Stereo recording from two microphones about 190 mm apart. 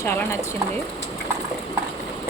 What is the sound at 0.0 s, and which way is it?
Speech, 15° left (ahead or behind).